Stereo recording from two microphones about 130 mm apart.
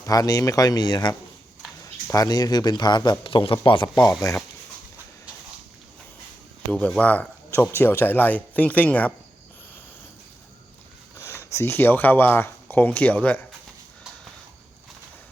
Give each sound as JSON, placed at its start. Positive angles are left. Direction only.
{"t": 0.0, "sound": "speech", "side_deg": 30}
{"t": 4.2, "sound": "speech", "side_deg": 25}
{"t": 6.7, "sound": "speech", "side_deg": 10}
{"t": 11.2, "sound": "speech", "side_deg": 20}